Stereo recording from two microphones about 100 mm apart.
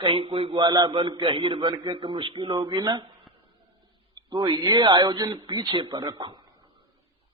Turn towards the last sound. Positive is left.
turn(degrees=-50)  # may be behind; listen again after turning